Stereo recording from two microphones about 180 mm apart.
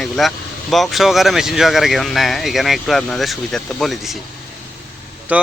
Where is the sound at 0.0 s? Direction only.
Centre (ahead or behind).